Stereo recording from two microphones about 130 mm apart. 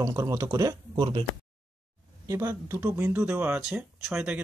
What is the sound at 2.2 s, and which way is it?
Speech, 20° right (ahead or behind).